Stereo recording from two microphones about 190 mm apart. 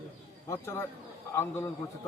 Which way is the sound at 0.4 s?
15° left (ahead or behind).